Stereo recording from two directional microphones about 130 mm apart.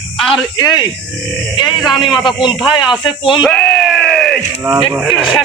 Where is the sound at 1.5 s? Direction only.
35° left (ahead or behind).